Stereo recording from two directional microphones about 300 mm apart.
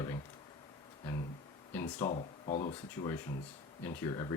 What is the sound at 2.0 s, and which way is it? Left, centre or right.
Speech, left.